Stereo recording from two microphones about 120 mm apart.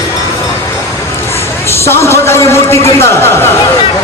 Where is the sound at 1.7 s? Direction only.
20° left (ahead or behind).